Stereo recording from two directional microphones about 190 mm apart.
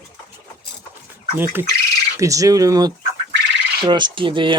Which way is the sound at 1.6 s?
10° right (ahead or behind).